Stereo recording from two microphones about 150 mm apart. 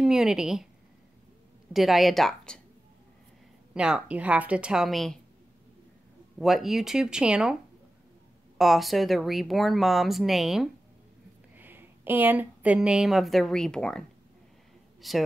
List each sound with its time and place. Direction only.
0.0 s speech: 5° right (ahead or behind)
1.7 s speech: centre (ahead or behind)
3.7 s speech: 5° right (ahead or behind)
6.4 s speech: centre (ahead or behind)
8.5 s speech: centre (ahead or behind)
11.5 s speech: 15° right (ahead or behind)